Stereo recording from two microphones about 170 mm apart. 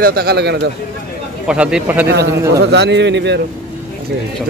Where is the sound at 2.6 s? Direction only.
85° right.